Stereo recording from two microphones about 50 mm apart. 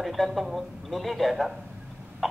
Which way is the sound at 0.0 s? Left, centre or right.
Centre.